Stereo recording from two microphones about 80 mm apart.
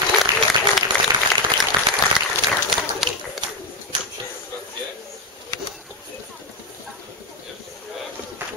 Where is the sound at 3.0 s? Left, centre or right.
Centre.